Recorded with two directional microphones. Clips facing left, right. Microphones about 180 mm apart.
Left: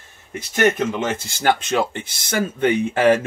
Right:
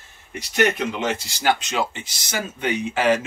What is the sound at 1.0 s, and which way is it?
Speech, 50° left (ahead or behind).